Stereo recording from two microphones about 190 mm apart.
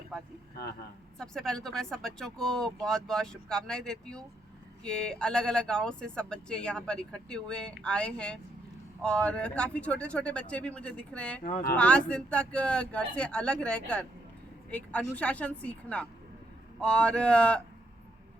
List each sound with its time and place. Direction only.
0.1 s a sound: centre (ahead or behind)
1.2 s speech: 5° left (ahead or behind)
11.4 s speech: 50° left (ahead or behind)
11.8 s speech: 5° left (ahead or behind)